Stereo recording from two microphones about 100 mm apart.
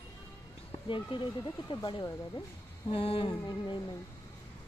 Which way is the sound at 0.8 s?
55° left (ahead or behind).